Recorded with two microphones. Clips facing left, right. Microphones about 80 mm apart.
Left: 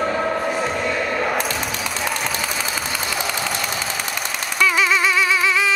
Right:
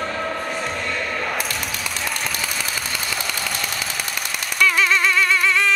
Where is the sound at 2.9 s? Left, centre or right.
Centre.